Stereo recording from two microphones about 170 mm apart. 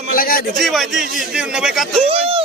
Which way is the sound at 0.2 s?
55° left (ahead or behind).